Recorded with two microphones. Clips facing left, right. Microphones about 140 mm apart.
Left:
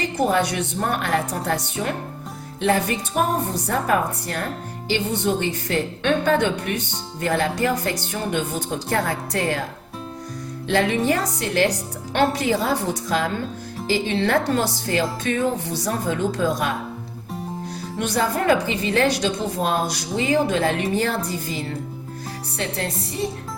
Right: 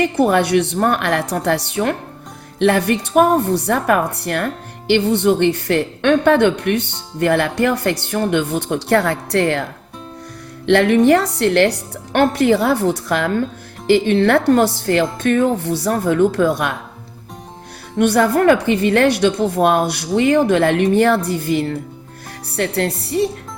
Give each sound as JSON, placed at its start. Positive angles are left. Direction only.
{"t": 0.2, "sound": "a woman's voice", "side_deg": -65}
{"t": 10.7, "sound": "a woman's voice", "side_deg": -65}
{"t": 18.0, "sound": "a woman's voice", "side_deg": -60}